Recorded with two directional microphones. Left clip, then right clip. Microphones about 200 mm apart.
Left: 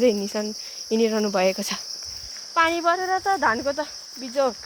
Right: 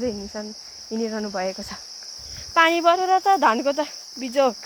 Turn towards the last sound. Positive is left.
turn(degrees=-25)  # may be behind; listen again after turning